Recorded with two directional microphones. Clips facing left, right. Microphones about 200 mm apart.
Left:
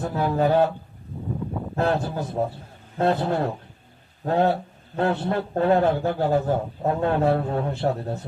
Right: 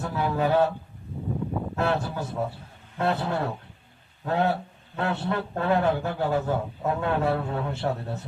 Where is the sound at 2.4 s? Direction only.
35° left (ahead or behind).